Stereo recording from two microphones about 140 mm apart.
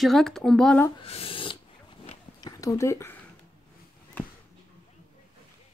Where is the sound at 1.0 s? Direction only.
45° left (ahead or behind).